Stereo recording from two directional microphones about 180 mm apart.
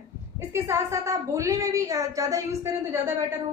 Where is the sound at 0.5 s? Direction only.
15° right (ahead or behind).